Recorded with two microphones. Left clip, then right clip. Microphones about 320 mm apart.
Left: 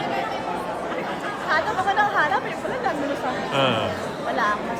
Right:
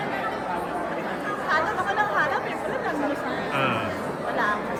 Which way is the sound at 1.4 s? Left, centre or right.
Left.